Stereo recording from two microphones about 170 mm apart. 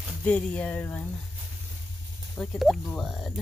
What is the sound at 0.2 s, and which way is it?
Speech, 10° left (ahead or behind).